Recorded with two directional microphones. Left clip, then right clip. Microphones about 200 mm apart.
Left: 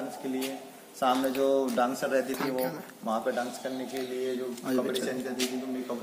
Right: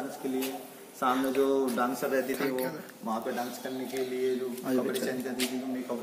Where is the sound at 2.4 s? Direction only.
35° left (ahead or behind).